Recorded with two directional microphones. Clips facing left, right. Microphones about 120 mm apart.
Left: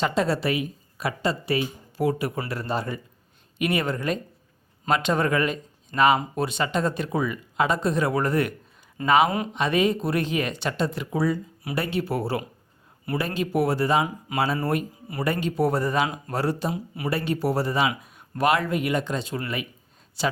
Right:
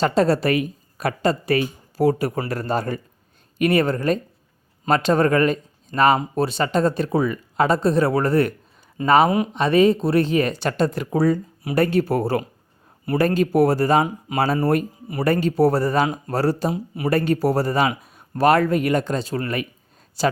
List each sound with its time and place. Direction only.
0.0 s speech: 40° right (ahead or behind)
16.7 s speech: 25° right (ahead or behind)
17.1 s speech: 45° right (ahead or behind)